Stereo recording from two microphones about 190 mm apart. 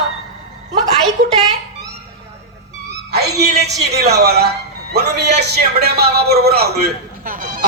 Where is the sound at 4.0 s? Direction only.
60° right (ahead or behind).